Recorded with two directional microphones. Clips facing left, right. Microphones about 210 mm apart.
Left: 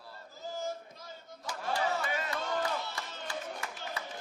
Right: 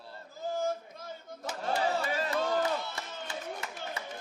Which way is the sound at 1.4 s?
25° right (ahead or behind).